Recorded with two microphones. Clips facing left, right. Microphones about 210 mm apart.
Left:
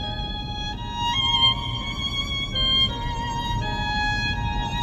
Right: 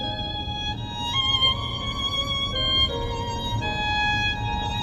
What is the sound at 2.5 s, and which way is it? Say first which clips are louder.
Music: right 4 dB; 50° right (ahead or behind).